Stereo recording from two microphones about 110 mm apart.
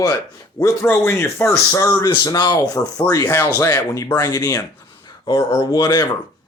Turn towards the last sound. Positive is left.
turn(degrees=40)  # may be behind; listen again after turning